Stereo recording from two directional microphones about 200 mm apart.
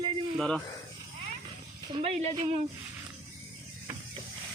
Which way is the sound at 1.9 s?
30° right (ahead or behind).